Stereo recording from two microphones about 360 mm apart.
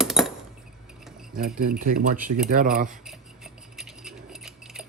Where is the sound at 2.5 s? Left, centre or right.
Right.